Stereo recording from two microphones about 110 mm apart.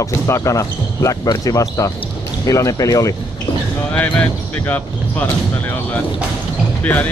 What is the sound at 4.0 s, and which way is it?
Speech, 15° left (ahead or behind).